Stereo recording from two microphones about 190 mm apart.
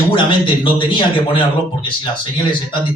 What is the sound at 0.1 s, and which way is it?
Speech, 25° left (ahead or behind).